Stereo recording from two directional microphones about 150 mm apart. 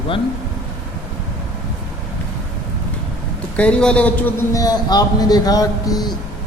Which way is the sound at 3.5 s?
5° left (ahead or behind).